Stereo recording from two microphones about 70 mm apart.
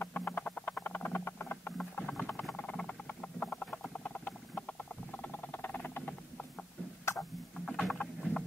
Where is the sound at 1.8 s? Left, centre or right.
Centre.